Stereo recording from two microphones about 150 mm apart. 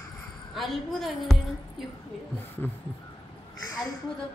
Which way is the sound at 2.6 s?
15° left (ahead or behind).